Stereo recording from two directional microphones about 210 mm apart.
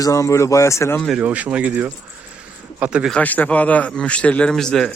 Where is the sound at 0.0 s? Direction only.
15° left (ahead or behind).